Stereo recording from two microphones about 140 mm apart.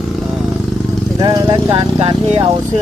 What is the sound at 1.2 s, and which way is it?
Speech, 25° right (ahead or behind).